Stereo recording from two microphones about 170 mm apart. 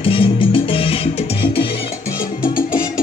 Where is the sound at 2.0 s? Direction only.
15° left (ahead or behind).